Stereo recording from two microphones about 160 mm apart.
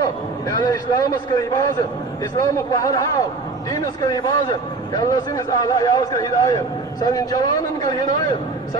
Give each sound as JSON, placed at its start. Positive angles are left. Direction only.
{"t": 0.0, "sound": "a man's voice", "side_deg": 25}
{"t": 2.3, "sound": "a man's voice", "side_deg": 20}